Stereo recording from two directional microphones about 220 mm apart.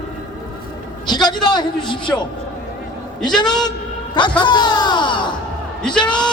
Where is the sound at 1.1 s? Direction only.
20° left (ahead or behind).